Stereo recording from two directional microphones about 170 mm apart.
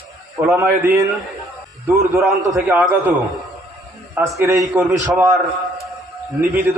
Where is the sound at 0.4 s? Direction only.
15° right (ahead or behind).